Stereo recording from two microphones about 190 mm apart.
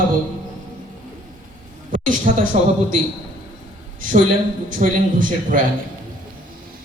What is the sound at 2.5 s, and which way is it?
Speech, 40° right (ahead or behind).